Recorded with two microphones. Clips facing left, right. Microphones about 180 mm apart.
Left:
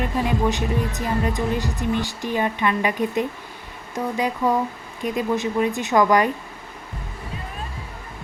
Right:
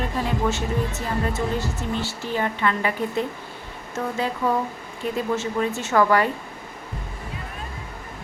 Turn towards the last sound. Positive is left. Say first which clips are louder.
# left 2 dB
turn(degrees=15)  # may be behind; listen again after turning